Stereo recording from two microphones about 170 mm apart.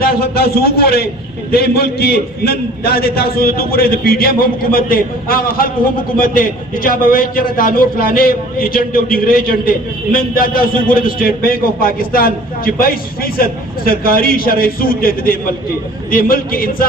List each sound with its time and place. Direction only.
0.0 s a man's voice: 65° left (ahead or behind)